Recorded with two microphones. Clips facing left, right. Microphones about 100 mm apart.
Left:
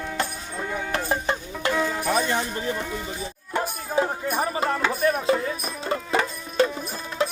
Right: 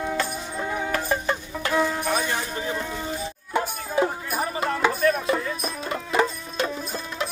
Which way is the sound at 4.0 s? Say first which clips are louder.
Even; 5° right (ahead or behind).